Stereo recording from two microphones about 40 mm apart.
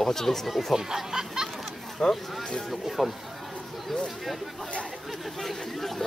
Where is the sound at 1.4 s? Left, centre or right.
Centre.